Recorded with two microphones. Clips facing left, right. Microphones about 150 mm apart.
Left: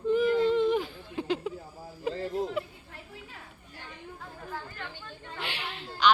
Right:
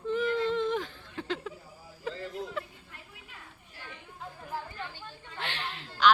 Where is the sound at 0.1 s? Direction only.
5° left (ahead or behind); by 2.6 s 25° left (ahead or behind).